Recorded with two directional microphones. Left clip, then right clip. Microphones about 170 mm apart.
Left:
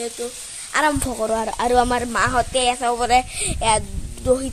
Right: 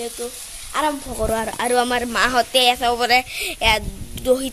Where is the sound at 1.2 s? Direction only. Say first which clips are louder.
Even; 5° right (ahead or behind).